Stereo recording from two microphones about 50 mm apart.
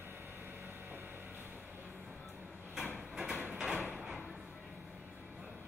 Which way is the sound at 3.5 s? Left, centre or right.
Centre.